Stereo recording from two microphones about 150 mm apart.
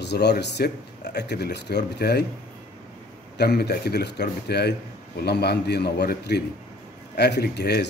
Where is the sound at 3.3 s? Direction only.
90° left.